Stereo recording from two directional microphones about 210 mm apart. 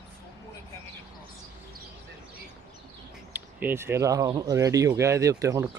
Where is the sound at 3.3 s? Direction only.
10° right (ahead or behind).